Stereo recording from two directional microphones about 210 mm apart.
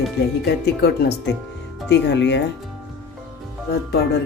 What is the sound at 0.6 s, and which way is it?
Speech, 50° left (ahead or behind).